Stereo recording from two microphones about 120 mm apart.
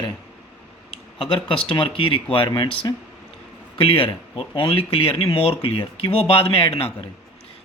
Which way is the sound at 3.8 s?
50° left (ahead or behind).